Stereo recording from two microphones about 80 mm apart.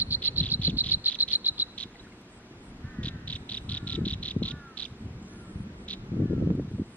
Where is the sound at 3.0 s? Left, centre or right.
Centre.